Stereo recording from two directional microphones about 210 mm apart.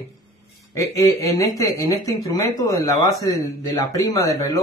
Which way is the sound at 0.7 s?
15° left (ahead or behind).